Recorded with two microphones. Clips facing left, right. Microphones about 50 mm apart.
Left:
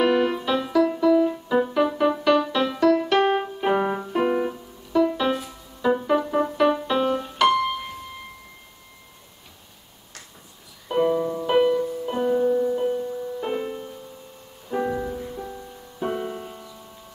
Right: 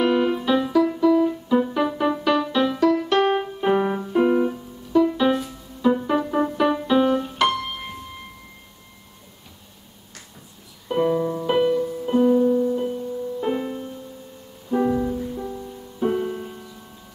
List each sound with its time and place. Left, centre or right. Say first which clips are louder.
0.0 s keyboard: even; centre
0.8 s music: right 1 dB; centre
1.7 s music: left 1 dB; centre
10.9 s music: even; centre
12.4 s music: right 2 dB; left
13.4 s music: right 4 dB; centre